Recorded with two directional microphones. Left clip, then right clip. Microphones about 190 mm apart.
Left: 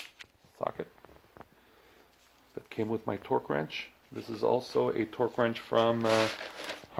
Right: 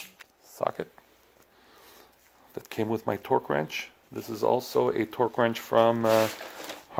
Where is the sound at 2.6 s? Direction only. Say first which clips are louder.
Right 4 dB; 55° right (ahead or behind).